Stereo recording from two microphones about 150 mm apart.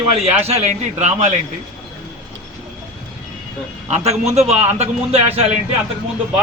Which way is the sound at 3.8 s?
45° right (ahead or behind).